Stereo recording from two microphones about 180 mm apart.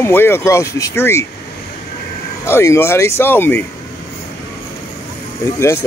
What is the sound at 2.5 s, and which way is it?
Speech, 15° left (ahead or behind).